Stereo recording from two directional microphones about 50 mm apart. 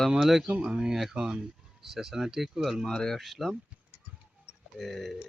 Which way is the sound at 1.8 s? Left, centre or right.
Centre.